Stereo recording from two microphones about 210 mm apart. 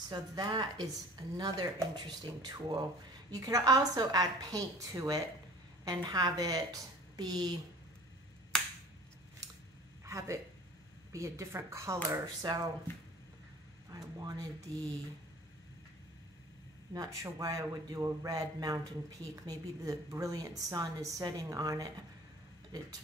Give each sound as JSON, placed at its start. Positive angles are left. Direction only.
{"t": 0.1, "sound": "a woman's voice", "side_deg": -20}
{"t": 10.0, "sound": "a man's voice", "side_deg": -15}
{"t": 13.8, "sound": "speech", "side_deg": -15}
{"t": 16.9, "sound": "a man's voice", "side_deg": -15}